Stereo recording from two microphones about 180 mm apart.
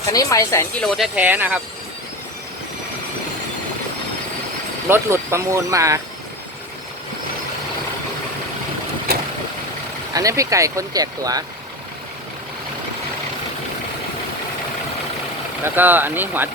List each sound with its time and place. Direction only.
0.0 s speech: 20° left (ahead or behind)
0.8 s speech: centre (ahead or behind)
4.9 s speech: 15° right (ahead or behind)
10.2 s speech: 20° right (ahead or behind)
15.6 s speech: 10° right (ahead or behind)